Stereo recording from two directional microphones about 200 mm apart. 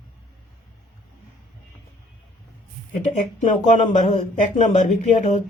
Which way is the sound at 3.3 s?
40° left (ahead or behind).